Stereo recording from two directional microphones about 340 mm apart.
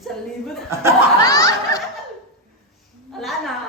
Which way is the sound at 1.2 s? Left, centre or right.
Centre.